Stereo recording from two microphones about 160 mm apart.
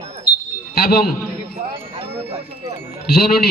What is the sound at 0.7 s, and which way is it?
Speech, 70° left (ahead or behind).